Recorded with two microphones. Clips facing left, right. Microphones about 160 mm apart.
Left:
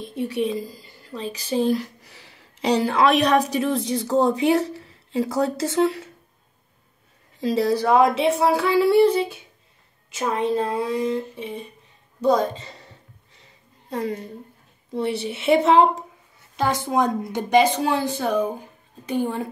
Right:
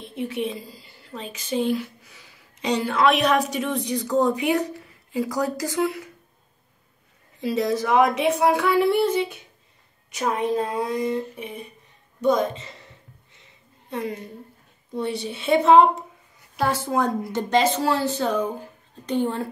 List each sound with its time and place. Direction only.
0.0 s a woman's voice: 35° left (ahead or behind)
2.1 s a sound: 70° left (ahead or behind)
2.6 s a woman's voice: 35° left (ahead or behind)
7.4 s a woman's voice: 35° left (ahead or behind)
15.2 s a woman's voice: 70° left (ahead or behind)
16.5 s speech: 20° left (ahead or behind)